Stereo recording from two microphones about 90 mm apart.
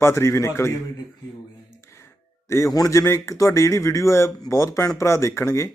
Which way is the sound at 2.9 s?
30° left (ahead or behind).